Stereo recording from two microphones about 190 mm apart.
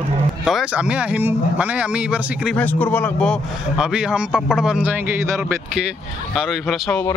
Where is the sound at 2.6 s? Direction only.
10° left (ahead or behind); by 5.8 s 10° right (ahead or behind).